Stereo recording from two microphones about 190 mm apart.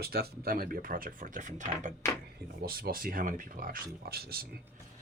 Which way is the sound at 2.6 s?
50° right (ahead or behind).